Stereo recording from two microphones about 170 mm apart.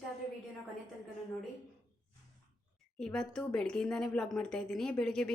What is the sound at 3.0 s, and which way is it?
A woman's voice, 5° left (ahead or behind).